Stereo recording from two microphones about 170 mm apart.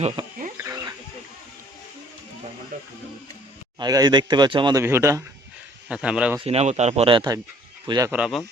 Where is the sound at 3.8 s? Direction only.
25° right (ahead or behind).